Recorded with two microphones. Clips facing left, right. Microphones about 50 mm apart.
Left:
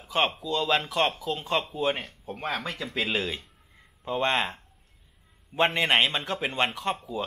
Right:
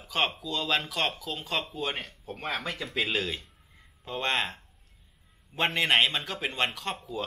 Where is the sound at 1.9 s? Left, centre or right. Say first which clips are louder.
Left 5 dB; centre.